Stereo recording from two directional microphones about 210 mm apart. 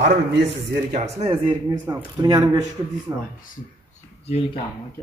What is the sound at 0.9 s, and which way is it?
A man's voice, 30° right (ahead or behind).